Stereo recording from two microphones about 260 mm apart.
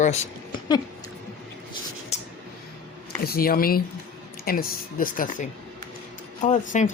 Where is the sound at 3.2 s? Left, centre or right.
Left.